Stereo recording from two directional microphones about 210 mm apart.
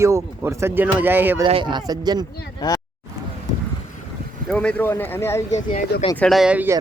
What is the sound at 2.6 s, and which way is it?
Speech, 20° left (ahead or behind).